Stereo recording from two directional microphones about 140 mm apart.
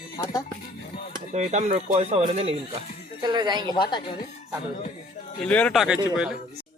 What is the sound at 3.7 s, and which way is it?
Speech, 35° left (ahead or behind).